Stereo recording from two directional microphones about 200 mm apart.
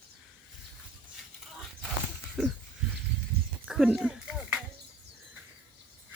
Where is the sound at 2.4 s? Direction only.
5° right (ahead or behind).